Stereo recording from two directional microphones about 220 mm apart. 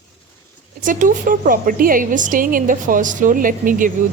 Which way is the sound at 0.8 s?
35° right (ahead or behind).